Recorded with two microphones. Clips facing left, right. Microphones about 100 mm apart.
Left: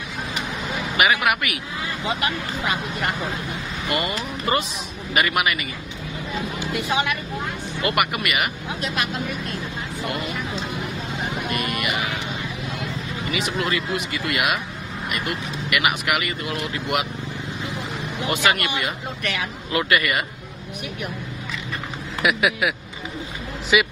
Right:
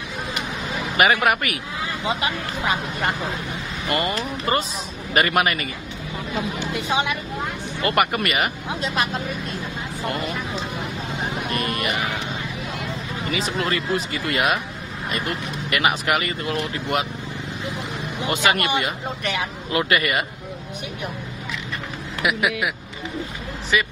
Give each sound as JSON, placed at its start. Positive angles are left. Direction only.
{"t": 0.9, "sound": "speech", "side_deg": -35}
{"t": 3.9, "sound": "speech", "side_deg": -35}
{"t": 6.6, "sound": "speech", "side_deg": -25}
{"t": 7.8, "sound": "speech", "side_deg": -35}
{"t": 11.5, "sound": "speech", "side_deg": -35}
{"t": 13.3, "sound": "speech", "side_deg": -35}
{"t": 18.2, "sound": "speech", "side_deg": -25}
{"t": 22.2, "sound": "a man's voice", "side_deg": 0}